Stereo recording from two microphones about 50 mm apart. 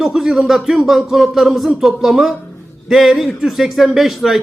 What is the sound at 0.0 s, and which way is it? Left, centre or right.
A man's voice, centre.